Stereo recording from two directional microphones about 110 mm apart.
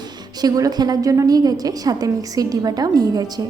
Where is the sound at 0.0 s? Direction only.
35° right (ahead or behind).